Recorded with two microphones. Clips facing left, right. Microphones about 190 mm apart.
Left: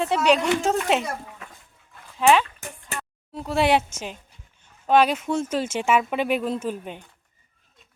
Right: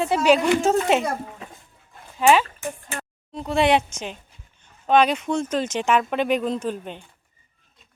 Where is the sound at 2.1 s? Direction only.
Centre (ahead or behind).